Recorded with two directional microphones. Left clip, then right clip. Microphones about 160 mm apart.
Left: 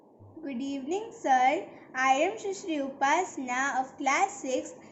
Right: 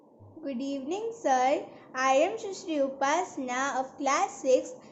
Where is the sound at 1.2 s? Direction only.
25° right (ahead or behind).